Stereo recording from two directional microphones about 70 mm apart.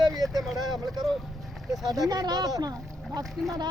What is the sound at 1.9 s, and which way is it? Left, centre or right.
Speech, right.